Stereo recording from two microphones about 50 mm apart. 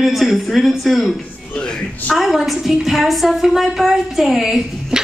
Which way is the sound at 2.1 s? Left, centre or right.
Centre.